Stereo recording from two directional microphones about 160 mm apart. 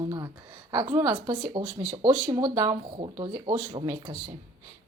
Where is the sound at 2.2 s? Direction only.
25° right (ahead or behind).